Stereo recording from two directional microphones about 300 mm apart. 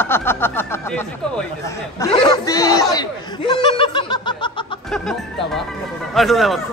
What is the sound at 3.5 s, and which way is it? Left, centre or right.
Snicker, centre.